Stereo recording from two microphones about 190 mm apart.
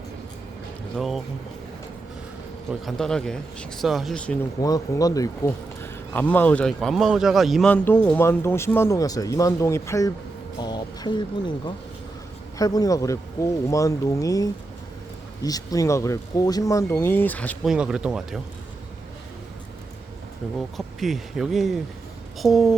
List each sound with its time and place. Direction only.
0.9 s speech: centre (ahead or behind)
2.8 s speech: 5° left (ahead or behind)
4.6 s speech: 20° left (ahead or behind)
17.7 s speech: 5° right (ahead or behind)
20.6 s speech: centre (ahead or behind)